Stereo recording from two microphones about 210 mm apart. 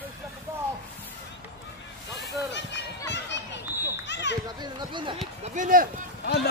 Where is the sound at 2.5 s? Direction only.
55° left (ahead or behind).